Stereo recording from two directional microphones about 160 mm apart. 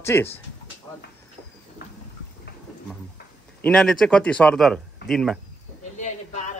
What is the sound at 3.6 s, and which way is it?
A man's voice, 5° left (ahead or behind).